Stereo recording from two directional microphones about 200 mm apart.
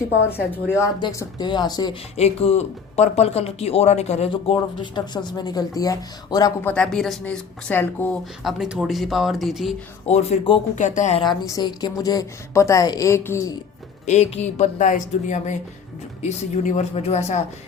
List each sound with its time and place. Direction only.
0.5 s a woman's voice: 15° left (ahead or behind)
2.1 s speech: 30° left (ahead or behind)
6.7 s speech: centre (ahead or behind)
10.1 s a woman's voice: 30° left (ahead or behind)
11.2 s a woman's voice: 20° left (ahead or behind)
14.0 s a woman's voice: 35° left (ahead or behind)